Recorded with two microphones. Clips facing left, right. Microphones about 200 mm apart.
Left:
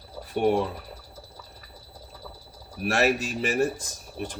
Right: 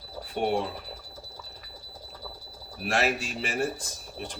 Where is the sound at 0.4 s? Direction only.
45° left (ahead or behind).